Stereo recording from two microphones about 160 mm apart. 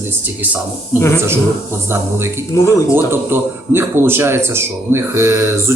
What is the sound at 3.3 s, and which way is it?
Speech, 15° right (ahead or behind).